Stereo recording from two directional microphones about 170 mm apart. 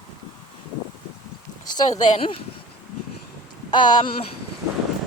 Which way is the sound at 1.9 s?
45° left (ahead or behind).